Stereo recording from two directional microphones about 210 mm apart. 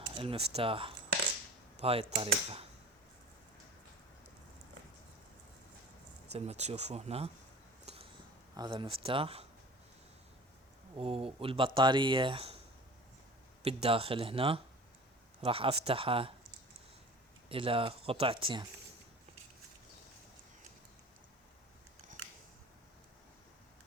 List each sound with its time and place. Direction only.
0.1 s speech: 25° right (ahead or behind)
6.3 s speech: 30° right (ahead or behind)
7.9 s a sound: 30° right (ahead or behind)
8.5 s speech: 20° right (ahead or behind)
10.9 s speech: 25° right (ahead or behind)
13.7 s speech: 30° right (ahead or behind)
17.5 s speech: 25° right (ahead or behind)